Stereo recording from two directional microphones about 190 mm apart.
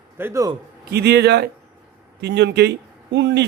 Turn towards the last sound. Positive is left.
turn(degrees=-65)  # may be behind; listen again after turning